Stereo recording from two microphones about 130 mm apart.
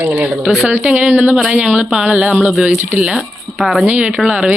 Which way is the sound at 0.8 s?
10° right (ahead or behind).